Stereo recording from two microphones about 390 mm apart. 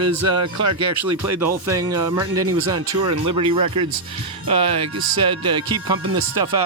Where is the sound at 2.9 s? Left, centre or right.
Right.